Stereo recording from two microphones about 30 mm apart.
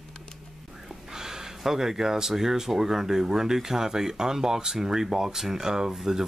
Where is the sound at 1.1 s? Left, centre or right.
Centre.